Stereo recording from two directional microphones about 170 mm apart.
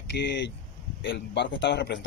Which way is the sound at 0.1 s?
90° left.